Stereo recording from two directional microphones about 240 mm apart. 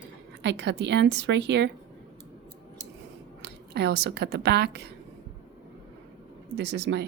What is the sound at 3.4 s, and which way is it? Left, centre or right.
Speech, right.